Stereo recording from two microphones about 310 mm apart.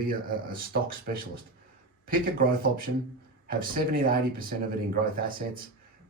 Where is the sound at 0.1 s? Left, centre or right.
Right.